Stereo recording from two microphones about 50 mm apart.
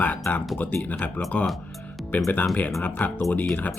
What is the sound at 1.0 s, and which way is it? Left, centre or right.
Speech, left.